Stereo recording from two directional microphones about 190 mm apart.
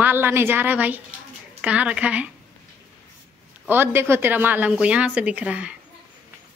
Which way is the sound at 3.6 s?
10° right (ahead or behind).